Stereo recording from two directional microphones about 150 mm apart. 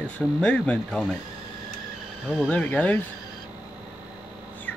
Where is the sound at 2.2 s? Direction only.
5° left (ahead or behind).